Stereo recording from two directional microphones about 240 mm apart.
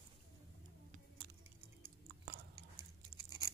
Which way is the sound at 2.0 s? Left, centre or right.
Right.